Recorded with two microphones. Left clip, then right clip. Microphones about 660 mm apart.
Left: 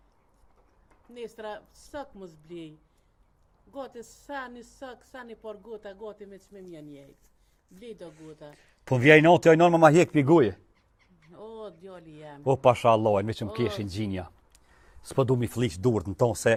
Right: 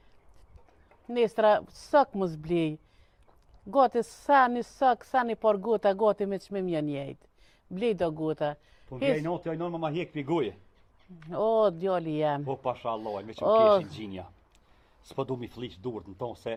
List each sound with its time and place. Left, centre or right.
1.1 s a woman's voice: right
8.9 s speech: left
10.2 s speech: left
11.3 s a woman's voice: right
12.5 s speech: left